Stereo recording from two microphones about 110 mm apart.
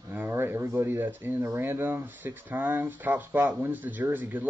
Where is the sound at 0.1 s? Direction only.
20° right (ahead or behind).